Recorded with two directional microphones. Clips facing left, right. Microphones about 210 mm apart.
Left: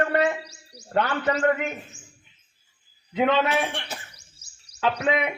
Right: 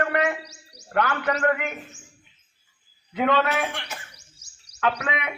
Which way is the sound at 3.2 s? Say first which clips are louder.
Left 1 dB; 20° left (ahead or behind).